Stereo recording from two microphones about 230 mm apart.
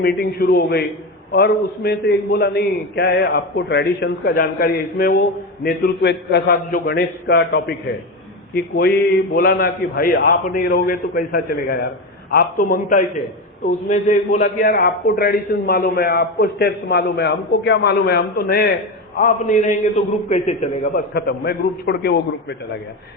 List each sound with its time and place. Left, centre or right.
0.0 s a man's voice: left